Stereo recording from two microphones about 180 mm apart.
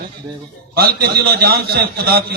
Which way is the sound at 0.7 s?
60° right (ahead or behind).